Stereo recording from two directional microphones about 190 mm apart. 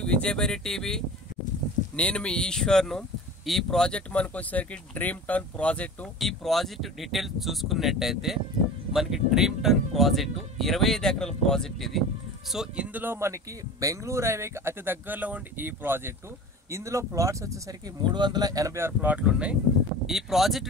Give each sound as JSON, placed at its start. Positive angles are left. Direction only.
{"t": 0.0, "sound": "speech", "side_deg": 5}